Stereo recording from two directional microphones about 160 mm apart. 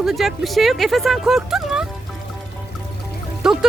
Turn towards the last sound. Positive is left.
turn(degrees=-5)  # may be behind; listen again after turning